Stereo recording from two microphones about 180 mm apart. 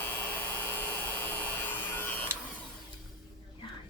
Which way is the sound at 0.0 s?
10° left (ahead or behind).